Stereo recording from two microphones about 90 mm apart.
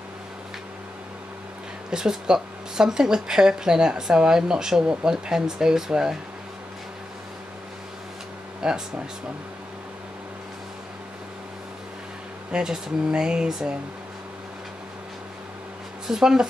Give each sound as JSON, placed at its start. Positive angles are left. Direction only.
{"t": 1.9, "sound": "speech", "side_deg": -5}
{"t": 8.6, "sound": "speech", "side_deg": -10}
{"t": 12.4, "sound": "speech", "side_deg": -10}
{"t": 16.1, "sound": "speech", "side_deg": -5}